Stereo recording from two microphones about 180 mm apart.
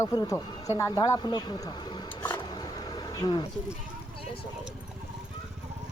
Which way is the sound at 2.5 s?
20° left (ahead or behind).